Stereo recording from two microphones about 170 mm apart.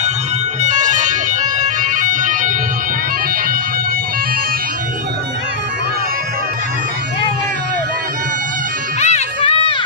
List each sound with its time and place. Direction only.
0.6 s music: 45° right (ahead or behind)
9.0 s run: 40° left (ahead or behind)